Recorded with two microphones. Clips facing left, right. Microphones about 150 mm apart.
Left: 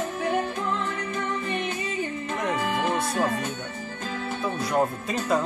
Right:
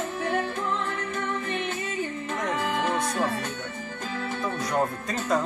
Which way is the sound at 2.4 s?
5° left (ahead or behind).